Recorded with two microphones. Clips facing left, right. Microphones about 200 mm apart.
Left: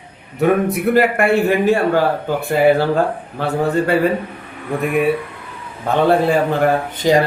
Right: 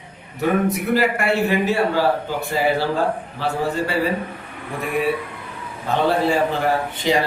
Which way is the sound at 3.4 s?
55° left (ahead or behind).